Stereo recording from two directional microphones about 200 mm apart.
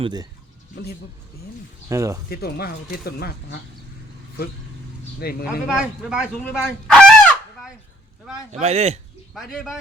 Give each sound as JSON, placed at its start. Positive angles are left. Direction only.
{"t": 0.0, "sound": "speech", "side_deg": -20}
{"t": 1.9, "sound": "speech", "side_deg": -15}
{"t": 2.3, "sound": "speech", "side_deg": 50}
{"t": 5.2, "sound": "speech", "side_deg": 50}
{"t": 5.5, "sound": "speech", "side_deg": -5}
{"t": 8.6, "sound": "speech", "side_deg": -30}
{"t": 9.3, "sound": "speech", "side_deg": 0}